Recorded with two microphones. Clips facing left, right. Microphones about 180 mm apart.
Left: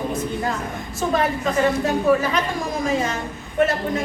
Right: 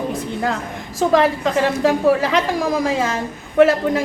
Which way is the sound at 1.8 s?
90° right.